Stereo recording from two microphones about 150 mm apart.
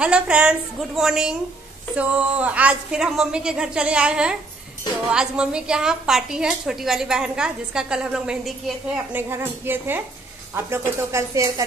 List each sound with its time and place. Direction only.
0.0 s a woman's voice: 5° right (ahead or behind)
9.1 s a woman's voice: 15° right (ahead or behind)